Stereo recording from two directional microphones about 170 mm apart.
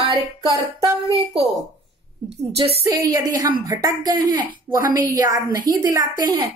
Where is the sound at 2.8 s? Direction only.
20° right (ahead or behind).